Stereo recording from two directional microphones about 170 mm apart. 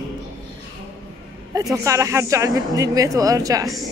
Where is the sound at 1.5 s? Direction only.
20° right (ahead or behind).